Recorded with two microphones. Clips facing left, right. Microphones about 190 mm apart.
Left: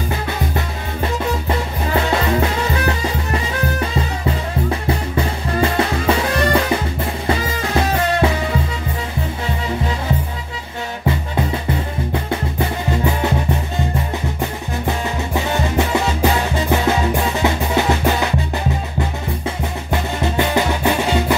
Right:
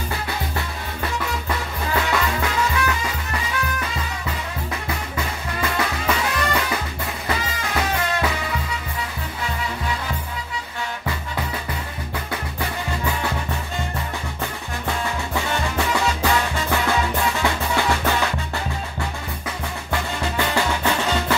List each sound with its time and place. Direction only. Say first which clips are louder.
1.0 s music: left 6 dB; 30° left (ahead or behind)
4.6 s music: left 8 dB; 30° left (ahead or behind)
12.1 s music: left 6 dB; 25° left (ahead or behind)
19.9 s music: left 4 dB; 20° left (ahead or behind)